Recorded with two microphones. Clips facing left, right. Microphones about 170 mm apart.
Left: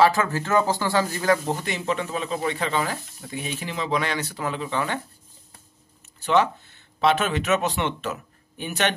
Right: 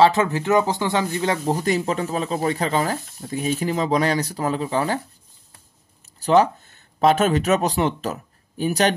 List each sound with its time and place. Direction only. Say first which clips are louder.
0.0 s speech: right 3 dB; 20° right (ahead or behind)
1.5 s speech: right 5 dB; 40° right (ahead or behind)
6.1 s speech: right 4 dB; 40° right (ahead or behind)